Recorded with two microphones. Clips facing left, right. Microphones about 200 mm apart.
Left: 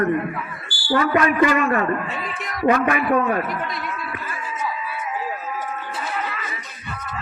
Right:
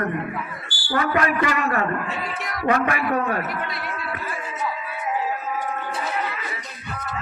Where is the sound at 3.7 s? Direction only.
45° left (ahead or behind).